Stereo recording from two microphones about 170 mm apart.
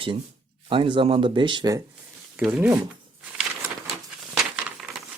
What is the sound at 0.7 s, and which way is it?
Speech, 30° right (ahead or behind).